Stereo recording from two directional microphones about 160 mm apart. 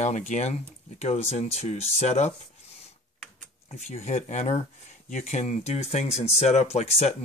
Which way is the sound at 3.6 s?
40° left (ahead or behind).